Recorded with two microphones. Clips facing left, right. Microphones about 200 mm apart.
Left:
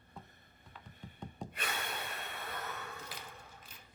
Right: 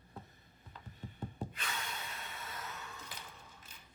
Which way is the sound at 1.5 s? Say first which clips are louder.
Left 3 dB; 60° left (ahead or behind).